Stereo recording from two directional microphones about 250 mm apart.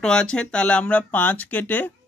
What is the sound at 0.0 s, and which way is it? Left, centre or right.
Speech, centre.